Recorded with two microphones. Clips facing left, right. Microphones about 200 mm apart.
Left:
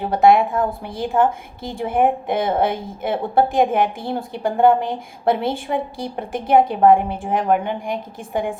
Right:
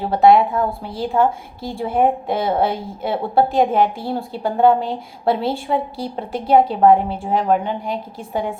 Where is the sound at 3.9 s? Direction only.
20° left (ahead or behind).